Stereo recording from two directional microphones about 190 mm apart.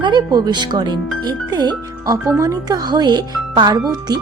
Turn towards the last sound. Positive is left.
turn(degrees=-20)  # may be behind; listen again after turning